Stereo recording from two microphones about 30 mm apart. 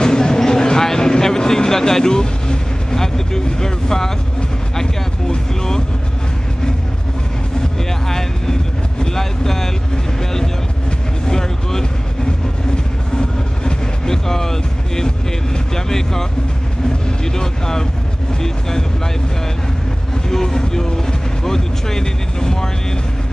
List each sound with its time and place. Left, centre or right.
0.0 s a sound: left
0.8 s vehicle: left
3.0 s speech: left
8.1 s a sound: centre
9.0 s vehicle: centre
11.2 s vehicle: centre
13.7 s vehicle: centre
15.7 s speech: centre
20.2 s speech: centre